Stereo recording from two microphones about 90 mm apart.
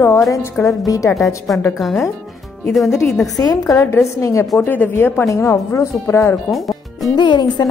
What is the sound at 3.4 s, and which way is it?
Speech, 40° left (ahead or behind).